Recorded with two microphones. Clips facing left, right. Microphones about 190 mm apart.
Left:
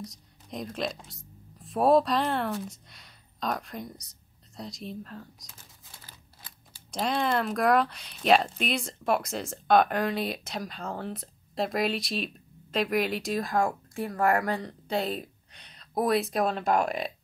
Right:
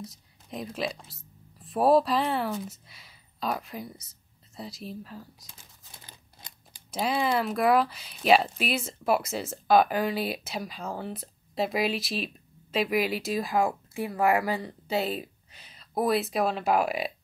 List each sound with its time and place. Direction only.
0.0 s speech: centre (ahead or behind)
6.0 s a sound: 20° right (ahead or behind)
6.9 s speech: 5° right (ahead or behind)